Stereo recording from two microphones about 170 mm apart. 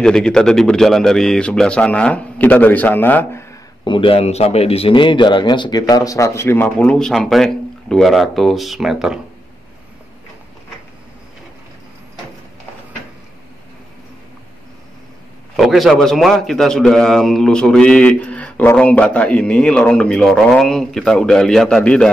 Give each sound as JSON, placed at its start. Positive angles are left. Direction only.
{"t": 0.0, "sound": "a man's voice", "side_deg": 5}
{"t": 3.8, "sound": "a man's voice", "side_deg": 30}
{"t": 15.5, "sound": "a man's voice", "side_deg": 0}